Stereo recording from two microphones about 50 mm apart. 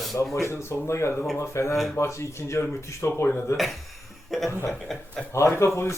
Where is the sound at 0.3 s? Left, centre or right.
Left.